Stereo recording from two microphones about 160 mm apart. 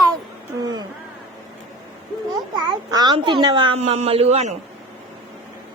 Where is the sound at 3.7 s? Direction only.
45° right (ahead or behind).